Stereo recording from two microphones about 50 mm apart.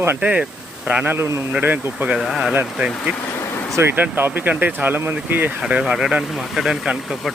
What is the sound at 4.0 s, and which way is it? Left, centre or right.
Speech, right.